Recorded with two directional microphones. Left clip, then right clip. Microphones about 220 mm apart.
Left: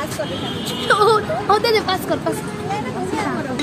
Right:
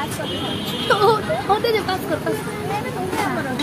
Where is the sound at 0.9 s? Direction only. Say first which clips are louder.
Left 2 dB; 50° left (ahead or behind).